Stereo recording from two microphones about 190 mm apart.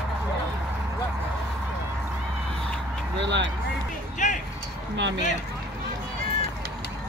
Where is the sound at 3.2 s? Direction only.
70° right (ahead or behind).